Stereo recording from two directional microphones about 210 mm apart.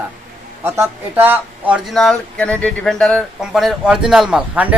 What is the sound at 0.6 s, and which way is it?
Speech, 10° right (ahead or behind).